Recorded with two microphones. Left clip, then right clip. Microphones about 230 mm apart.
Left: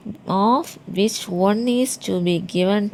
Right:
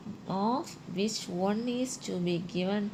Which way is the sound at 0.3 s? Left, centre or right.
Left.